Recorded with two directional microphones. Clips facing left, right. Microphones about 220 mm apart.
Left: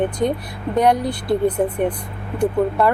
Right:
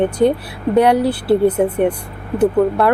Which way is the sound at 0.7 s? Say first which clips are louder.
Right 4 dB; 10° right (ahead or behind).